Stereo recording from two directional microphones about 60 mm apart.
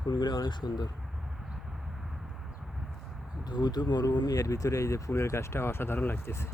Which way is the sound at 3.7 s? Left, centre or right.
Left.